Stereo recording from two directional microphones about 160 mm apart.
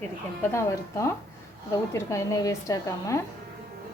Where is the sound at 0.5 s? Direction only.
20° left (ahead or behind).